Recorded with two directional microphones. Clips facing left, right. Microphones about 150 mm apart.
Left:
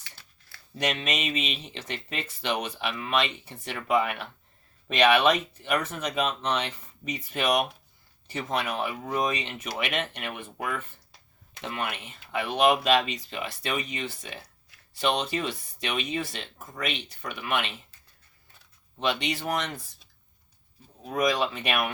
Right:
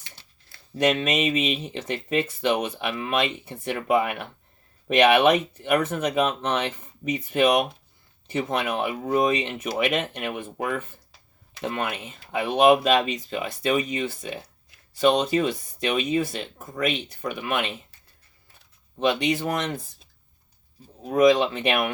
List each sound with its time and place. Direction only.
0.9 s speech: 50° right (ahead or behind)
19.2 s speech: 50° right (ahead or behind)
21.3 s speech: 25° right (ahead or behind)